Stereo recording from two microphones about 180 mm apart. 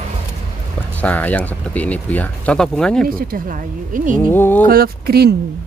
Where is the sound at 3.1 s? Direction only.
50° right (ahead or behind).